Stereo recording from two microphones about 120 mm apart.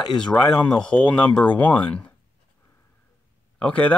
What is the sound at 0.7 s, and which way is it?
Speech, 10° left (ahead or behind).